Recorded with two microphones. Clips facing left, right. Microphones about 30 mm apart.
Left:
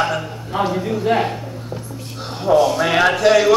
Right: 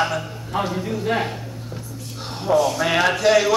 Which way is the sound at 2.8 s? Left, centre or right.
Centre.